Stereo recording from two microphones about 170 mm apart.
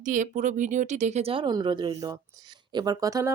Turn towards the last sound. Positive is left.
turn(degrees=-20)  # may be behind; listen again after turning